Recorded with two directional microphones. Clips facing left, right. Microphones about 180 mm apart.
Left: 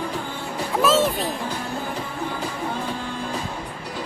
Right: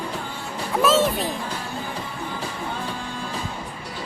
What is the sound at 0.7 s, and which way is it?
Music, centre (ahead or behind).